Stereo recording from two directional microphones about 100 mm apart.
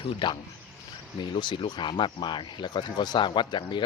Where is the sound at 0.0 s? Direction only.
55° left (ahead or behind).